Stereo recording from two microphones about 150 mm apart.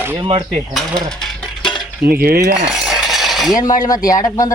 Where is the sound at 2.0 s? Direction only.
85° right.